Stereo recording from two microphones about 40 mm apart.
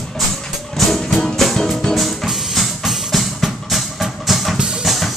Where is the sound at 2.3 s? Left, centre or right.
Centre.